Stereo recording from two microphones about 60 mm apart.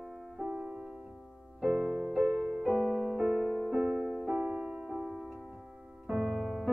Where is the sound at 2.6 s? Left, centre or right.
Centre.